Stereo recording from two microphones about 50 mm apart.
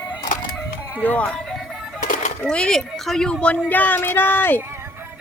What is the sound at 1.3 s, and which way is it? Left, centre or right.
Music, centre.